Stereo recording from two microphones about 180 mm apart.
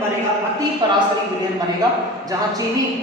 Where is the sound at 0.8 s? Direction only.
25° right (ahead or behind).